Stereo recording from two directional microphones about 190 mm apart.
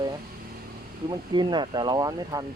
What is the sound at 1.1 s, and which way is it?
Speech, 25° right (ahead or behind).